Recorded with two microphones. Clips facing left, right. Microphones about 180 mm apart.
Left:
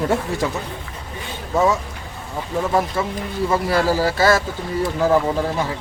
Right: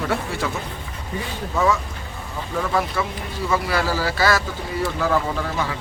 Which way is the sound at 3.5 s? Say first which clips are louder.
Left 3 dB; 45° left (ahead or behind).